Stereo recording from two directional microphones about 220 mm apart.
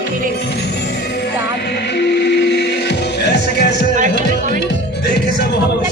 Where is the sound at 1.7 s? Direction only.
50° left (ahead or behind).